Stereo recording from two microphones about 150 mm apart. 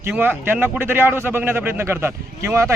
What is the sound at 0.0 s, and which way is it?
A man's voice, 15° right (ahead or behind).